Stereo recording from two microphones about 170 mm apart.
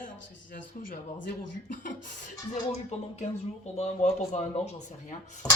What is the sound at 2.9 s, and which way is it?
Speech, 40° left (ahead or behind).